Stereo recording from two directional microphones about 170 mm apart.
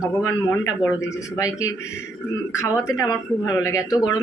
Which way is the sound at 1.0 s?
20° left (ahead or behind).